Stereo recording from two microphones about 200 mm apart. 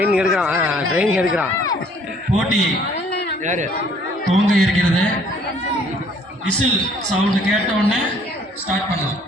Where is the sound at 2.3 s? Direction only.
Centre (ahead or behind).